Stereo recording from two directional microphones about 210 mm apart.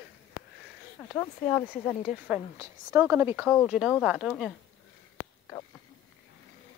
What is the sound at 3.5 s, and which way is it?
Speech, 5° left (ahead or behind).